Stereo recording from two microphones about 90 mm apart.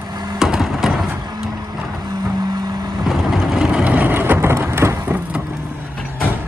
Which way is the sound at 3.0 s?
5° right (ahead or behind).